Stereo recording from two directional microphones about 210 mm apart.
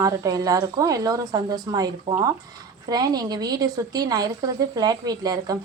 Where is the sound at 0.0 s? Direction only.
15° right (ahead or behind).